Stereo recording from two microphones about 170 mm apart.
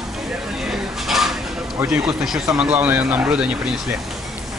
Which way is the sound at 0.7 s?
Centre (ahead or behind).